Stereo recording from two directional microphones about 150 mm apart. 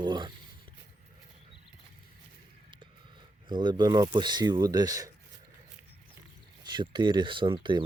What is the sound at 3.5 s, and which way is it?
Speech, 30° right (ahead or behind).